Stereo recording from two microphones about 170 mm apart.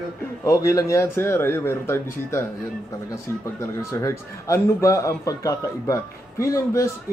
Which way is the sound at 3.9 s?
20° left (ahead or behind).